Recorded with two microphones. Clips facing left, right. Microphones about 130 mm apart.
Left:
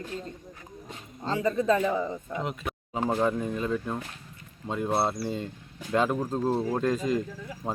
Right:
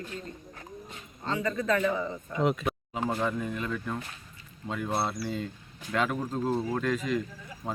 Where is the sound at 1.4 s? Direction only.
10° left (ahead or behind).